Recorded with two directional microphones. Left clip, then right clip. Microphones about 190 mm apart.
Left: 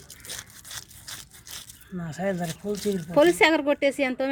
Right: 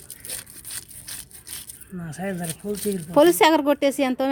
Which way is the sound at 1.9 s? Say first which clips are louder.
Left 2 dB; 15° left (ahead or behind).